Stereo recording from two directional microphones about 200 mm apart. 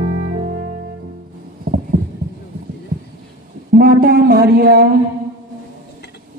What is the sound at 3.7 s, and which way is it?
Speech, 45° right (ahead or behind).